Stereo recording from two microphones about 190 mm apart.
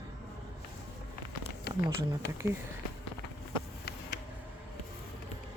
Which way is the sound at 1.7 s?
60° left (ahead or behind).